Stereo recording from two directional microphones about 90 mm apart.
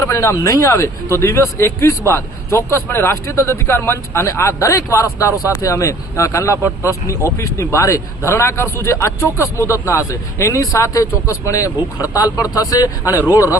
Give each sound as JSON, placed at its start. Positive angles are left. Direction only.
{"t": 0.0, "sound": "speech", "side_deg": 30}